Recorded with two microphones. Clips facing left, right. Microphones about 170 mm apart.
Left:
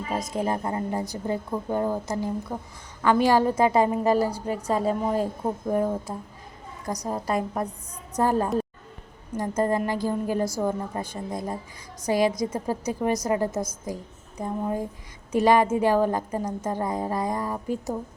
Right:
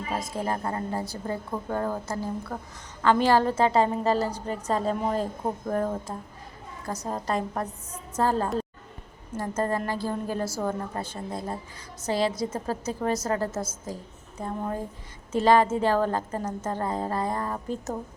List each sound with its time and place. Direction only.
0.2 s a woman's voice: 20° left (ahead or behind)